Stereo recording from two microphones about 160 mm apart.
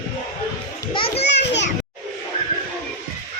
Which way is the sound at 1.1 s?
90° left.